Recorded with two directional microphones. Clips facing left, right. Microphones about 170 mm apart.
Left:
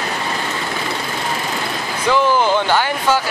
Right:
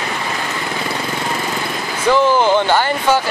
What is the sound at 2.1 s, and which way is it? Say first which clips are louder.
Speech: right 2 dB; 15° right (ahead or behind).